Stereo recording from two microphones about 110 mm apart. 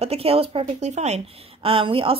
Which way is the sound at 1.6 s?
55° right (ahead or behind).